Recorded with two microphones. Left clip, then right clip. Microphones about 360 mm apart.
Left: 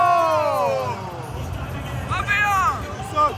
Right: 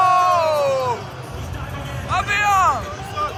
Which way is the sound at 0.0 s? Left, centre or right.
Centre.